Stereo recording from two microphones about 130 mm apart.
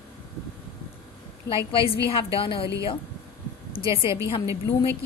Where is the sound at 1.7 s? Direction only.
45° left (ahead or behind).